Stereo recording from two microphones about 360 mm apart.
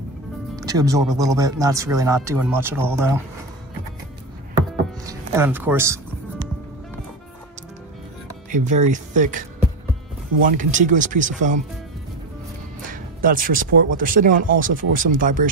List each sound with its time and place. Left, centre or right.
0.6 s music: centre
1.1 s speech: centre
5.0 s speech: centre
8.5 s speech: right
12.9 s music: right
13.9 s speech: right